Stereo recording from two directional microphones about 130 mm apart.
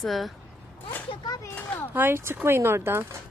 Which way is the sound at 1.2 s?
30° left (ahead or behind).